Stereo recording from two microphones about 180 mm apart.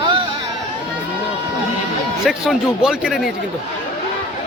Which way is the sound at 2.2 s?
5° right (ahead or behind).